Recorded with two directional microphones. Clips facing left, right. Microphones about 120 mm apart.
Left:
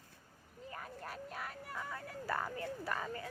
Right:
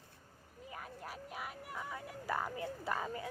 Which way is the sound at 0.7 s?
5° right (ahead or behind).